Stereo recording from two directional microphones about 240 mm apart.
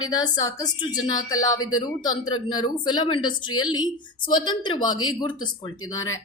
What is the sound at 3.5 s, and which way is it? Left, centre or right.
Speech, left.